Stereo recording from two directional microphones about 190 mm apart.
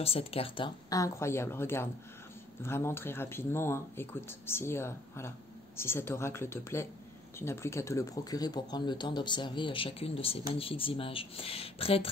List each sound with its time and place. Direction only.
0.0 s speech: 30° left (ahead or behind)
0.8 s speech: 15° left (ahead or behind)